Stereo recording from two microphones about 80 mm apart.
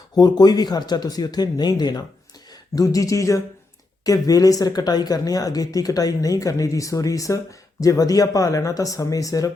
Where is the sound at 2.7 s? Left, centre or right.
Left.